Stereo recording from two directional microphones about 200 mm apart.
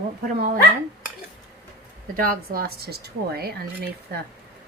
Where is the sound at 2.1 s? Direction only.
45° right (ahead or behind).